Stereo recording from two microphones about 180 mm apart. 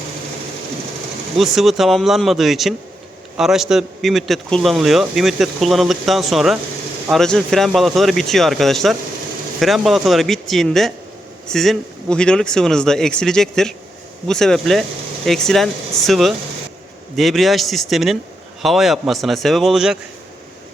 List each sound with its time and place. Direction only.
1.4 s a man's voice: centre (ahead or behind)